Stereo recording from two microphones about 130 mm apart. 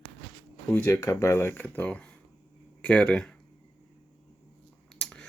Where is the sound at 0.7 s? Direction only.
20° left (ahead or behind).